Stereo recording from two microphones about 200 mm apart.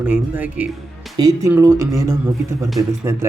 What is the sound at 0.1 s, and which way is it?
A man's voice, 5° right (ahead or behind).